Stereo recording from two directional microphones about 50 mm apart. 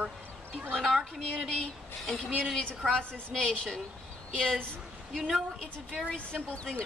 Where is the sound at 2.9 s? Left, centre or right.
Centre.